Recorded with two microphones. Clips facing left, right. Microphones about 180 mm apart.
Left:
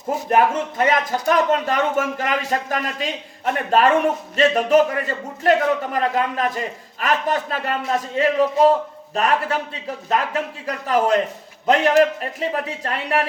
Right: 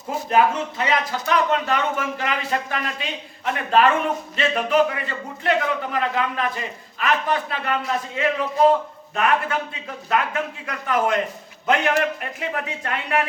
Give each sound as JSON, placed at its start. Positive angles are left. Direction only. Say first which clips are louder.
{"t": 0.3, "sound": "a man's voice", "louder": "left 1 dB", "side_deg": 50}